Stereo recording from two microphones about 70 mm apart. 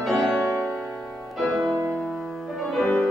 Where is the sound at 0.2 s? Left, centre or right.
Right.